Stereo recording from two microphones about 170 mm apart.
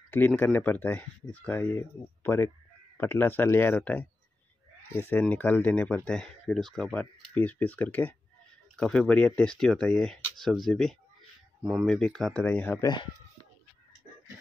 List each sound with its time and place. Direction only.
0.1 s speech: 10° left (ahead or behind)
12.8 s speech: 25° left (ahead or behind)